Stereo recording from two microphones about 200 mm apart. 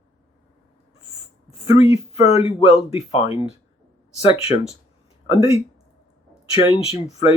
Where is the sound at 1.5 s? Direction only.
30° left (ahead or behind).